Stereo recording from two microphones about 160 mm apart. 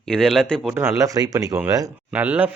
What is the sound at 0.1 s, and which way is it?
Speech, 5° left (ahead or behind).